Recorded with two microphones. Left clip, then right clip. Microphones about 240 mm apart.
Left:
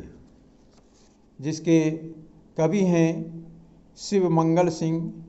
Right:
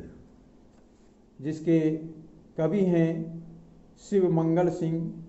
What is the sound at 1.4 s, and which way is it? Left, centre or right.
Speech, left.